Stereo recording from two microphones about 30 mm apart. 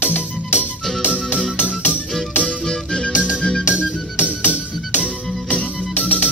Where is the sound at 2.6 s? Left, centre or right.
Left.